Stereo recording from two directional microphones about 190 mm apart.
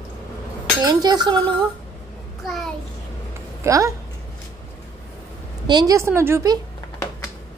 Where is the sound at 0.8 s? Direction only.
20° right (ahead or behind).